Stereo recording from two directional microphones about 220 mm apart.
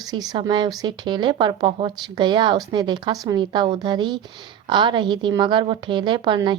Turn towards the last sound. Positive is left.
turn(degrees=-20)  # may be behind; listen again after turning